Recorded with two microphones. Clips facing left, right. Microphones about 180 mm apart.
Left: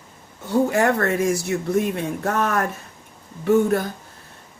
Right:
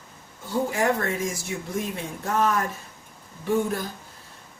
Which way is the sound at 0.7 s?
65° left (ahead or behind).